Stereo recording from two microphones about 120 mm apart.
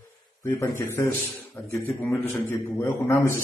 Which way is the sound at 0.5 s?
25° left (ahead or behind).